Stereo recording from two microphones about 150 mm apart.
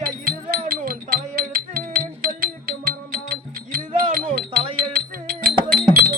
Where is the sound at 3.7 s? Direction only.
90° right.